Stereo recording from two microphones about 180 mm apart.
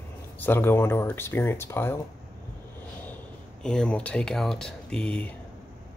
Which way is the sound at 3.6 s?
5° left (ahead or behind).